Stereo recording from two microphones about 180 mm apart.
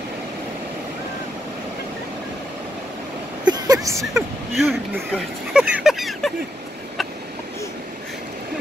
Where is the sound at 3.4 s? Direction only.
20° right (ahead or behind).